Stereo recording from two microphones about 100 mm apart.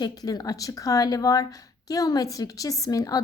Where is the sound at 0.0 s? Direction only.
40° left (ahead or behind).